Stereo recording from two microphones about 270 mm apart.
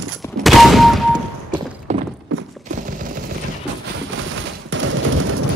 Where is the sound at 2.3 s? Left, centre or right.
Right.